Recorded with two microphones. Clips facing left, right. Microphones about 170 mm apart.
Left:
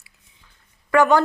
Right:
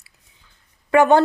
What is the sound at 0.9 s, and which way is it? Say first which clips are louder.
Speech: right 2 dB; 20° right (ahead or behind).